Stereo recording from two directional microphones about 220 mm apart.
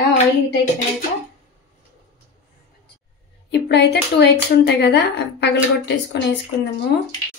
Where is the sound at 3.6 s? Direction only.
50° left (ahead or behind).